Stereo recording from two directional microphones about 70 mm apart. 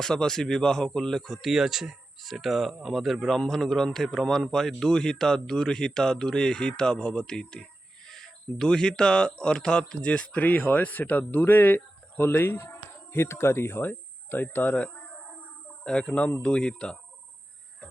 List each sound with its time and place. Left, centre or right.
0.0 s a man's voice: centre; by 14.8 s left
15.8 s a man's voice: centre